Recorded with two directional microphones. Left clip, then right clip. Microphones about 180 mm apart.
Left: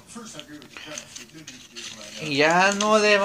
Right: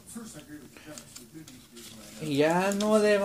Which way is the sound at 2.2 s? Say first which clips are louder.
Left 5 dB; 25° right (ahead or behind).